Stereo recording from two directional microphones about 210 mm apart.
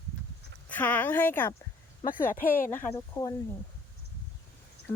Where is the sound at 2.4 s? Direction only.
40° left (ahead or behind).